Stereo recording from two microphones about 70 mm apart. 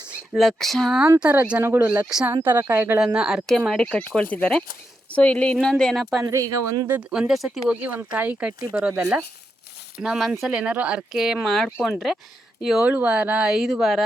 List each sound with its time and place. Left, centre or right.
0.3 s speech: centre
1.2 s speech: right
3.2 s speech: centre
3.8 s speech: centre
6.2 s speech: right
7.1 s speech: centre
7.8 s speech: right
10.0 s speech: centre
11.1 s speech: centre
12.8 s speech: centre